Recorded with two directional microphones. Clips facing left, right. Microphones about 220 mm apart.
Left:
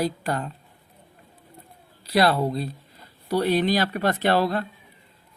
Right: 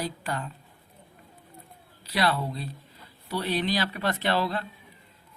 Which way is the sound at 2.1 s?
45° left (ahead or behind).